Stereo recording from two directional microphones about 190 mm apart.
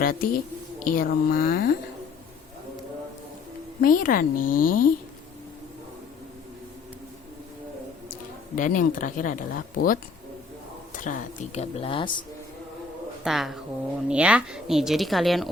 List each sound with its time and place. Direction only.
0.0 s speech: 50° left (ahead or behind)
3.8 s speech: 45° left (ahead or behind)
8.5 s speech: 45° left (ahead or behind); by 12.2 s 25° left (ahead or behind)
13.2 s speech: centre (ahead or behind)